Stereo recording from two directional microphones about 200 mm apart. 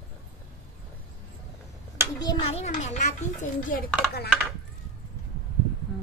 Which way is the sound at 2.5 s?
35° left (ahead or behind).